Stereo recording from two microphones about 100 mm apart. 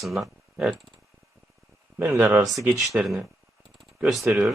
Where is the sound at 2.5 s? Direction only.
Centre (ahead or behind).